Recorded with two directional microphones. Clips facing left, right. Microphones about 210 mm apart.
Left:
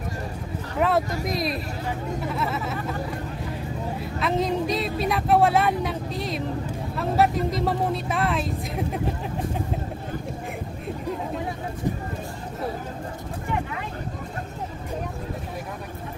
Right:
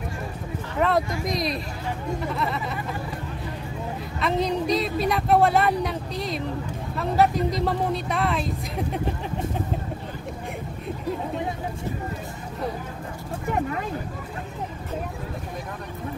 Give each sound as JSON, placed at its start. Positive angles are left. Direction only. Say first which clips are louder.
{"t": 0.7, "sound": "speech", "louder": "even", "side_deg": 5}
{"t": 4.2, "sound": "speech", "louder": "even", "side_deg": 0}
{"t": 13.5, "sound": "speech", "louder": "right 4 dB", "side_deg": -45}